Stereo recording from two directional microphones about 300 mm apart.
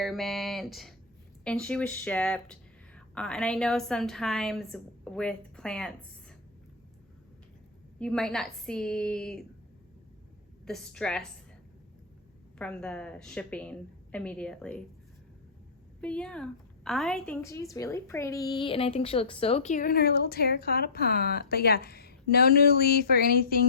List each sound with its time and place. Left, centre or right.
0.0 s speech: centre
7.9 s speech: centre
10.7 s speech: centre
12.5 s speech: centre
16.0 s a woman's voice: centre; by 23.6 s left